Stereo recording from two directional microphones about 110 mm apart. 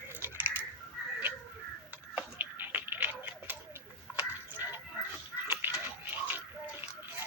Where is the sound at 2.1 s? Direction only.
15° right (ahead or behind).